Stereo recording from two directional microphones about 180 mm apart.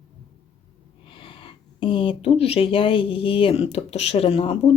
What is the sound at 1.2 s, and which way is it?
Speech, 30° left (ahead or behind).